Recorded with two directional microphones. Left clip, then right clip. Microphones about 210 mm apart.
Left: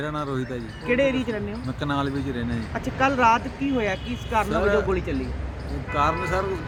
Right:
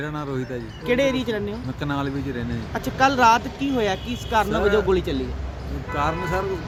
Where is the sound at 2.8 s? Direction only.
35° right (ahead or behind).